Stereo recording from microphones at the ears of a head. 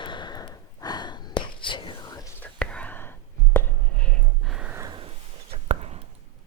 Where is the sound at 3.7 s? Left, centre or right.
Right.